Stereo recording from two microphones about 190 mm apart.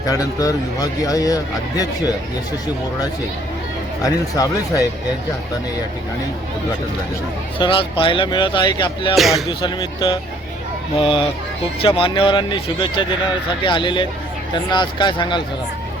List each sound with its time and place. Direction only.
0.0 s speech: 20° left (ahead or behind)
4.0 s speech: 20° left (ahead or behind)
7.6 s speech: 25° left (ahead or behind)
9.1 s speech: centre (ahead or behind)
9.5 s speech: 25° left (ahead or behind)